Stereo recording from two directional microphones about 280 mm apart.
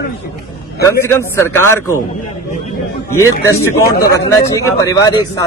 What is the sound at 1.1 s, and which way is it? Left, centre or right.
Speech, centre.